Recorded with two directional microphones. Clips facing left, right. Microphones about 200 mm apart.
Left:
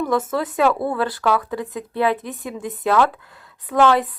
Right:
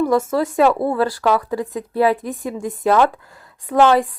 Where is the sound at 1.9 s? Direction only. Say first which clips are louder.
Right 4 dB; 40° right (ahead or behind).